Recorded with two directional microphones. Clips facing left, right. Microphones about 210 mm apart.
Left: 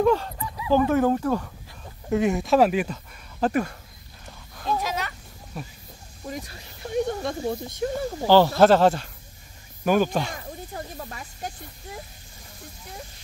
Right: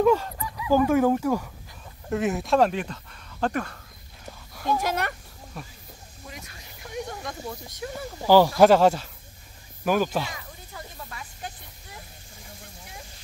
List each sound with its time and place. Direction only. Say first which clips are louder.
0.0 s speech: even; 5° right (ahead or behind); by 3.7 s 10° left (ahead or behind)
4.8 s speech: right 3 dB; 60° right (ahead or behind)
6.2 s speech: left 9 dB; 35° left (ahead or behind)
8.3 s speech: even; 10° right (ahead or behind)
10.3 s snake: left 6 dB; 40° left (ahead or behind)